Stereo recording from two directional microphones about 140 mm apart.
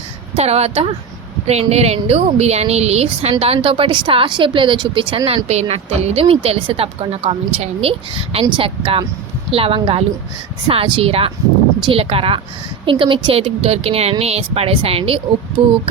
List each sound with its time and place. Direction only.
0.3 s a woman's voice: 50° right (ahead or behind)
5.5 s a woman's voice: 50° right (ahead or behind)